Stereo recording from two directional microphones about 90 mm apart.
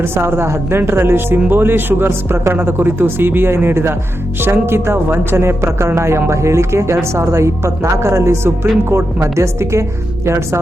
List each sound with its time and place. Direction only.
0.0 s a woman's voice: 25° right (ahead or behind)